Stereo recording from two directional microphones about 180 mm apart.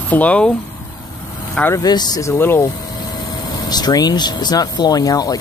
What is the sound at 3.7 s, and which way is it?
Speech, 20° left (ahead or behind).